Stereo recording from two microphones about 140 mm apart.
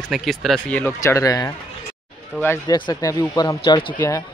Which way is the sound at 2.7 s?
30° left (ahead or behind).